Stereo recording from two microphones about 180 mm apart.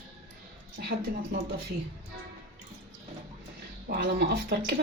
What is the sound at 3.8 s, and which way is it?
Speech, 60° right (ahead or behind).